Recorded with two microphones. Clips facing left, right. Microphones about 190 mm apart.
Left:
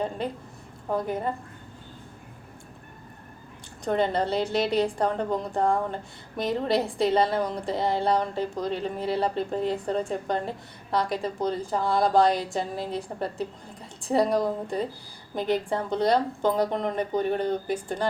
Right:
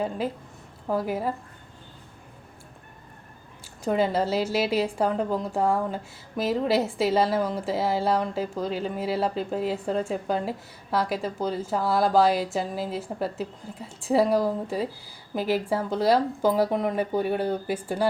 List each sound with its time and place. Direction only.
0.2 s a woman's voice: 5° right (ahead or behind)
3.8 s a woman's voice: 5° right (ahead or behind)